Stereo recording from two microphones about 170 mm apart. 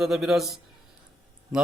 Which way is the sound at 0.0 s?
Centre (ahead or behind).